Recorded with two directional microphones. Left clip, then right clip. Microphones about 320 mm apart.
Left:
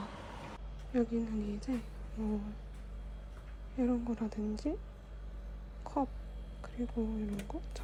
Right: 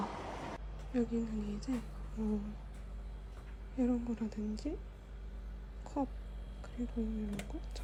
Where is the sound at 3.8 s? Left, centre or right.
Centre.